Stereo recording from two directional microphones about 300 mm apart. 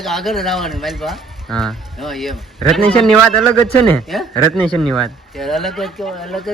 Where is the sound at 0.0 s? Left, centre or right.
Centre.